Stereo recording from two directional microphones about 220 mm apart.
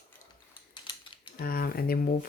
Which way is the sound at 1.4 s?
40° left (ahead or behind).